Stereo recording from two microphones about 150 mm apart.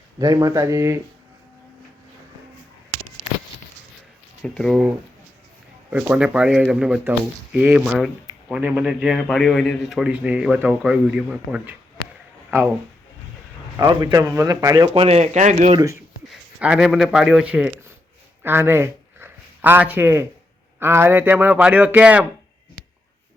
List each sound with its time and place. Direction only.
0.2 s speech: 25° right (ahead or behind)
4.4 s a man's voice: 5° left (ahead or behind)
5.9 s a man's voice: 10° right (ahead or behind)
13.7 s speech: 25° right (ahead or behind)
14.9 s speech: 45° right (ahead or behind)
16.3 s a man's voice: 5° right (ahead or behind)